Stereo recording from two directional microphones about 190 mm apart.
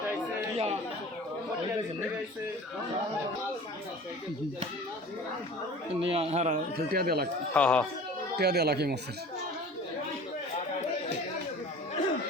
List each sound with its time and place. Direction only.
0.5 s chatter: 30° right (ahead or behind)
6.0 s a man's voice: 30° right (ahead or behind)
6.9 s speech: 55° right (ahead or behind)
7.5 s speech: 5° left (ahead or behind)
8.4 s speech: 60° right (ahead or behind)